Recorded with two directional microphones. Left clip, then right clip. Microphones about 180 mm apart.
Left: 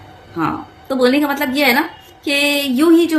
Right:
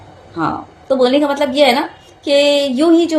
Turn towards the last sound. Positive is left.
turn(degrees=15)  # may be behind; listen again after turning